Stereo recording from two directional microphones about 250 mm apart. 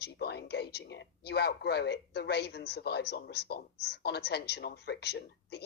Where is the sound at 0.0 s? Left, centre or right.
Left.